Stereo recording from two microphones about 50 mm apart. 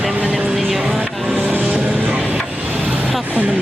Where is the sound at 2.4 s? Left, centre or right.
Right.